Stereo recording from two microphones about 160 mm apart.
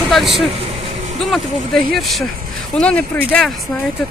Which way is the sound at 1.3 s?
Centre (ahead or behind).